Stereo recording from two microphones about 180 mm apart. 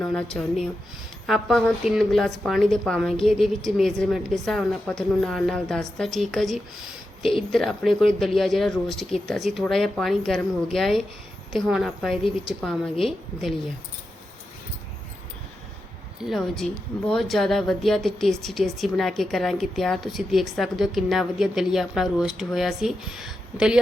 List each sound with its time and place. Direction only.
0.0 s a woman's voice: 5° left (ahead or behind)
7.2 s speech: 30° left (ahead or behind)
7.5 s a woman's voice: centre (ahead or behind)
16.2 s a woman's voice: centre (ahead or behind)